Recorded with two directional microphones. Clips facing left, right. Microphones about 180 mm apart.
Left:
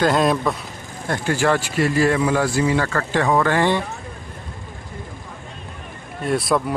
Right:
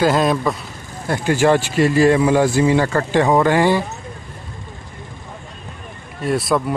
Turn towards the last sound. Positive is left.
turn(degrees=0)  # may be behind; listen again after turning